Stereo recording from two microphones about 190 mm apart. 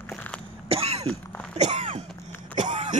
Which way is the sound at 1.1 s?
5° left (ahead or behind).